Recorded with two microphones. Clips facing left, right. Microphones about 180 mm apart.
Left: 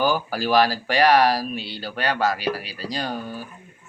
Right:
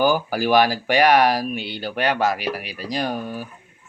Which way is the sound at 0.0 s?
15° right (ahead or behind).